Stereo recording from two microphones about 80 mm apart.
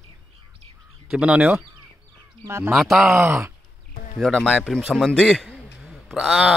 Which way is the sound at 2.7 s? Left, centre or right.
Centre.